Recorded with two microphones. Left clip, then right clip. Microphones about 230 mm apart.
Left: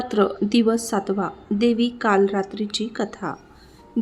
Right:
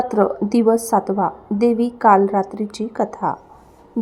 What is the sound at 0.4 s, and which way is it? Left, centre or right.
A woman's voice, centre.